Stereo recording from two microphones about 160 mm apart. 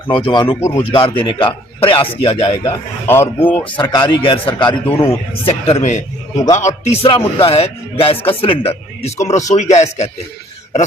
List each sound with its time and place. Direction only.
0.1 s speech: 30° left (ahead or behind)
3.1 s speech: 15° left (ahead or behind)
3.6 s speech: 30° left (ahead or behind)
4.9 s speech: 20° left (ahead or behind)
5.5 s a man's voice: 40° left (ahead or behind)